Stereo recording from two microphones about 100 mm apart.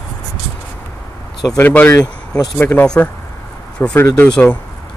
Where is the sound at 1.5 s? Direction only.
15° left (ahead or behind).